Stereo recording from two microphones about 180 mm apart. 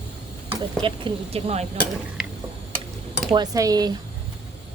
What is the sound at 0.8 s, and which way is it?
Speech, 30° right (ahead or behind).